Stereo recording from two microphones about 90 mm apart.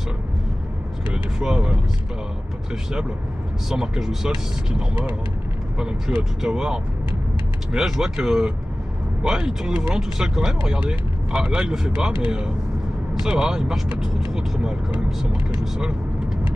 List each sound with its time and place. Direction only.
1.1 s speech: 10° right (ahead or behind)
3.6 s speech: 10° right (ahead or behind)